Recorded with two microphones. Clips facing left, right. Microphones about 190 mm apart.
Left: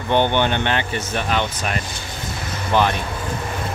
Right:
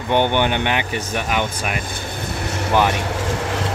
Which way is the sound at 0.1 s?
15° right (ahead or behind).